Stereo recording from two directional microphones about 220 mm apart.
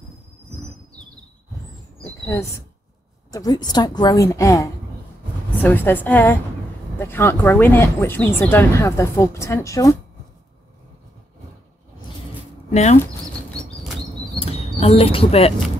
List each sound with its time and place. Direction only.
3.3 s speech: 15° left (ahead or behind)
12.7 s speech: 30° left (ahead or behind)
14.4 s a sound: 30° left (ahead or behind)